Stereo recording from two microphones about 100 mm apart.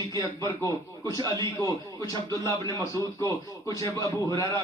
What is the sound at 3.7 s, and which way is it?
Speech, 35° left (ahead or behind).